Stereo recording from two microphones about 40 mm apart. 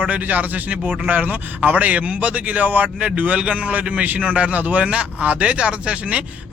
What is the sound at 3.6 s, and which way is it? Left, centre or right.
Speech, right.